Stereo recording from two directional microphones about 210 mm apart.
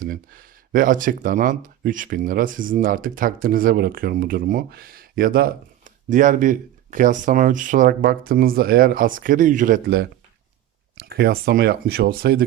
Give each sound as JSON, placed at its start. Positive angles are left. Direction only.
{"t": 0.0, "sound": "speech", "side_deg": -40}